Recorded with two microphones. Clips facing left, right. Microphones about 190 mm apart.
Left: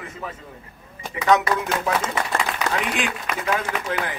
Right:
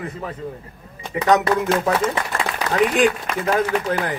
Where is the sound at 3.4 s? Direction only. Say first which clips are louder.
Right 6 dB; 35° right (ahead or behind).